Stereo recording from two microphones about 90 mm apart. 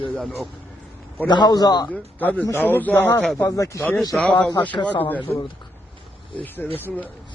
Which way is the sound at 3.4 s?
35° left (ahead or behind).